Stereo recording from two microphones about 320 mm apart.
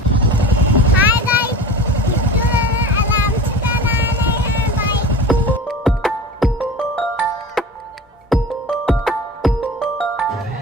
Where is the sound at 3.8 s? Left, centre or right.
Centre.